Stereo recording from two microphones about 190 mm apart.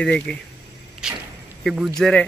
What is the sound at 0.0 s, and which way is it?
Speech, 5° left (ahead or behind).